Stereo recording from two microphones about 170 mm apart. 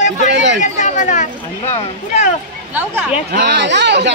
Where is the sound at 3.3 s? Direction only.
85° right.